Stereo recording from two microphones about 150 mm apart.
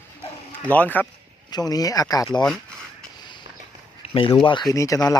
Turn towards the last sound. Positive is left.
turn(degrees=20)  # may be behind; listen again after turning